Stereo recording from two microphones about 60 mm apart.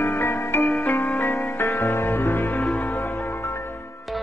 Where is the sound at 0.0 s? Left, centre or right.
Left.